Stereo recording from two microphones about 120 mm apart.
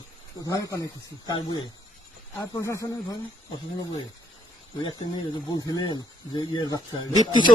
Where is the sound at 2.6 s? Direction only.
25° left (ahead or behind).